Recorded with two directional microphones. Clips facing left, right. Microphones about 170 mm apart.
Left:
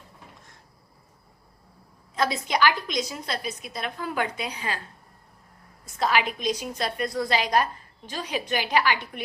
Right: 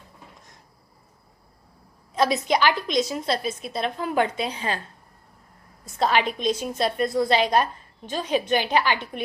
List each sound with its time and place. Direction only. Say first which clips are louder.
2.1 s a woman's voice: right 4 dB; 20° right (ahead or behind)
6.0 s a woman's voice: right 3 dB; 30° right (ahead or behind)